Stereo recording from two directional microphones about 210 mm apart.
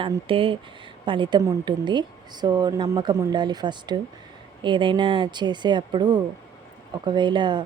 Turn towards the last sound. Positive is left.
turn(degrees=-20)  # may be behind; listen again after turning